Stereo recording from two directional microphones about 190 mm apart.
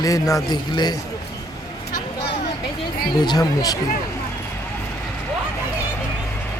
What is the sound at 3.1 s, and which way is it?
Speech, 20° left (ahead or behind).